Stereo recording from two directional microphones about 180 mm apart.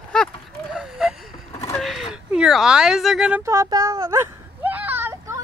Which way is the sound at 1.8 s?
Centre (ahead or behind).